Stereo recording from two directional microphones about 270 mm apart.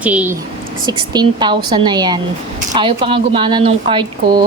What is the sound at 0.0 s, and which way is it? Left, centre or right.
A woman's voice, centre.